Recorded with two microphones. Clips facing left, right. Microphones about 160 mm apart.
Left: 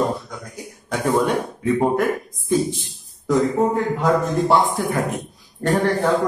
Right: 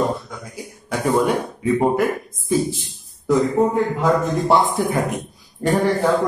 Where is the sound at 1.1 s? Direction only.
5° right (ahead or behind).